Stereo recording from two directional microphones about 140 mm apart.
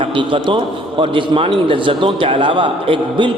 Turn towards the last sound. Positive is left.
turn(degrees=-35)  # may be behind; listen again after turning